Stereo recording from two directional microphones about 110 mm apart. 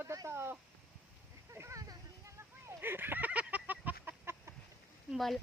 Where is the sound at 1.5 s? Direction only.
25° right (ahead or behind).